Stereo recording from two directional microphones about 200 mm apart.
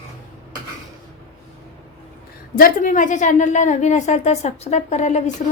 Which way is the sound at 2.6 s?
45° left (ahead or behind).